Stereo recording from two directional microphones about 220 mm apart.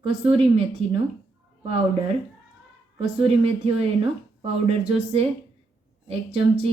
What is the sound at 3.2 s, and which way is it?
Speech, 25° right (ahead or behind).